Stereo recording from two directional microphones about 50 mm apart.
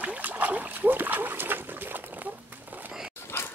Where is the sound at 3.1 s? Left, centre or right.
Left.